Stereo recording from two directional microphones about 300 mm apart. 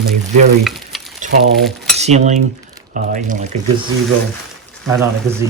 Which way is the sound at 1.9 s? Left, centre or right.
Right.